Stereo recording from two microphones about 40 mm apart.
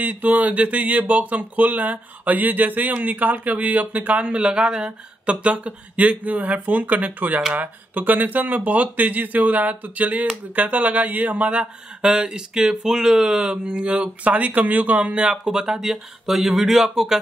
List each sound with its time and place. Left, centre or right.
0.0 s speech: right
12.0 s speech: centre
15.4 s speech: centre